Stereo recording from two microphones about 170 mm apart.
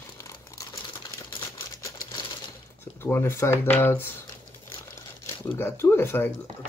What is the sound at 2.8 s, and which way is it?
Speech, 15° left (ahead or behind).